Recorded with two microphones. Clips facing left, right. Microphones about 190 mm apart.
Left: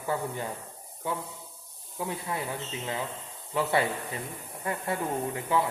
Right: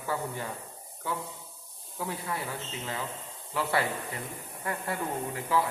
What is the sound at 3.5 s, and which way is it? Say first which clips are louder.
Speech: left 3 dB; 20° left (ahead or behind).